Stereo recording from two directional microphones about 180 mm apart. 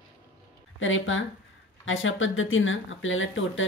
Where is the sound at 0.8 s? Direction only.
90° left.